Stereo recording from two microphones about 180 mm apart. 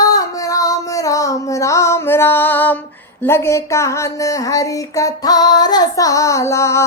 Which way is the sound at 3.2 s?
15° left (ahead or behind).